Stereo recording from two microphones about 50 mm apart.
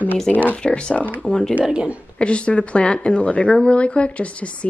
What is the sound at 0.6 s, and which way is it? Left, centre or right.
Speech, left.